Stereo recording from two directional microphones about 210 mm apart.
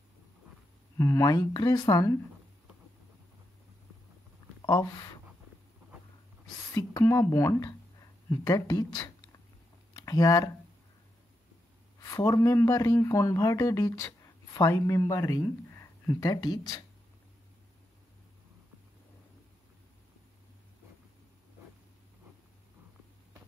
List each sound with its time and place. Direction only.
0.9 s speech: 10° left (ahead or behind)
4.6 s a sound: 15° left (ahead or behind)
6.7 s speech: 15° left (ahead or behind)
12.0 s speech: 15° left (ahead or behind)